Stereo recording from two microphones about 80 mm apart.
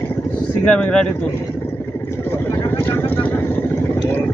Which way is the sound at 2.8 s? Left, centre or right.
Left.